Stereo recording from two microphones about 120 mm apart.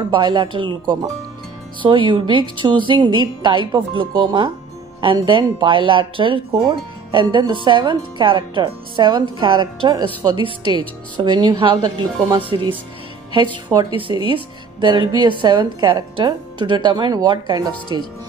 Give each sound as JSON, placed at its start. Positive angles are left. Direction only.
{"t": 0.1, "sound": "a woman's voice", "side_deg": -40}
{"t": 13.7, "sound": "a woman's voice", "side_deg": -40}